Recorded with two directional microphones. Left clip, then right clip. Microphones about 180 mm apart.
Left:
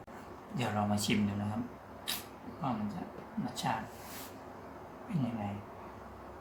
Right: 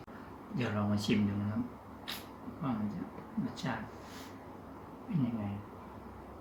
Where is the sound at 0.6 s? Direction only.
15° left (ahead or behind).